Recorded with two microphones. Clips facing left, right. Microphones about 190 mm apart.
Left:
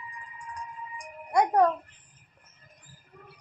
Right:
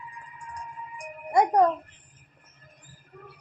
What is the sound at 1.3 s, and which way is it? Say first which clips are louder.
Speech: right 2 dB; 15° right (ahead or behind).